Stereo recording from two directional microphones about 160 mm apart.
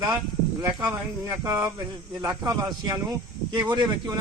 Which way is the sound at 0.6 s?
15° right (ahead or behind).